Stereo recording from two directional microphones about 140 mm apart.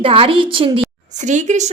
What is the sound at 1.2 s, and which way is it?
Speech, 60° right (ahead or behind).